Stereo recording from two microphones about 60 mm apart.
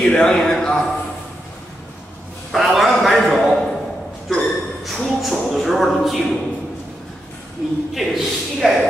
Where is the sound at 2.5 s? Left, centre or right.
Centre.